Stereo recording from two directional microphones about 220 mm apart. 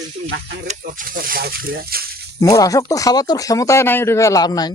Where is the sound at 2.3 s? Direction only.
15° left (ahead or behind).